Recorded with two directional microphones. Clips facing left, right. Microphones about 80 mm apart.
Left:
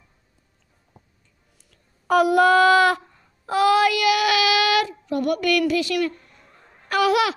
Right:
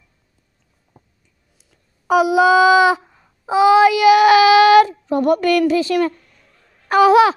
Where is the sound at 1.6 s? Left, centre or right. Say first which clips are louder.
Right 1 dB; centre; by 6.1 s right.